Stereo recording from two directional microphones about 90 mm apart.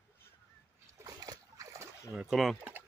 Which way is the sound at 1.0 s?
45° right (ahead or behind).